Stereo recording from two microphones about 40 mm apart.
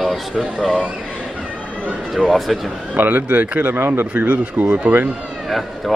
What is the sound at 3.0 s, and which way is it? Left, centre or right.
Speech, right.